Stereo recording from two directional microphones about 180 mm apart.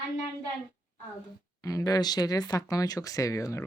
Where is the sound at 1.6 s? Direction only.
20° left (ahead or behind).